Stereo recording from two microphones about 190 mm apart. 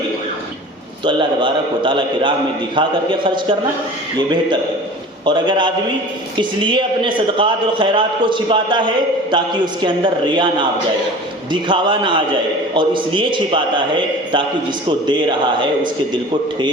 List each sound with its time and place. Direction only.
1.0 s a man's voice: 25° right (ahead or behind)
5.2 s a man's voice: 25° right (ahead or behind)
9.8 s a man's voice: 25° right (ahead or behind)